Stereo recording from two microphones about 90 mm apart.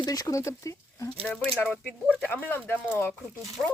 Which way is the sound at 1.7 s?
15° left (ahead or behind).